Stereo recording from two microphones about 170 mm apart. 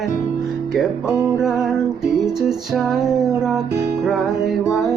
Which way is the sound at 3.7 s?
15° right (ahead or behind).